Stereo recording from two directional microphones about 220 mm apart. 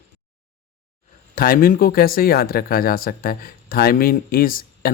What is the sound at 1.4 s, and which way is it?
Speech, 40° left (ahead or behind).